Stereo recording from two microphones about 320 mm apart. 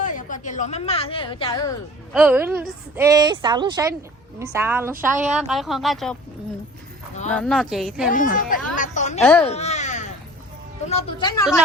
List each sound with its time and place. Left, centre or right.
0.0 s a woman's voice: left
2.1 s a woman's voice: centre
7.3 s a woman's voice: centre
8.1 s speech: left
9.4 s a sound: centre
10.8 s speech: centre